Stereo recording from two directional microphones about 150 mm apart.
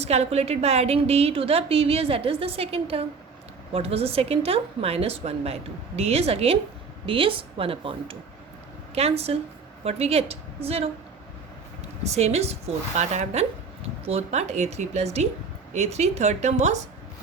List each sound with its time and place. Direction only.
0.0 s a woman's voice: 45° right (ahead or behind)
12.0 s speech: 45° right (ahead or behind)